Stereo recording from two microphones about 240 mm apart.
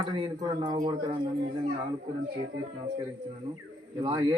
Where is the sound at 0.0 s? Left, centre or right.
Centre.